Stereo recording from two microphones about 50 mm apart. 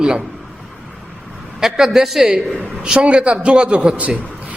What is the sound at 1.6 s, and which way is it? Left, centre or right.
Speech, centre.